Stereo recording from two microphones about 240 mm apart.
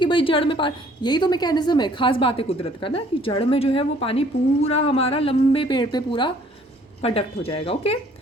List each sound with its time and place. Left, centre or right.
0.0 s a woman's voice: left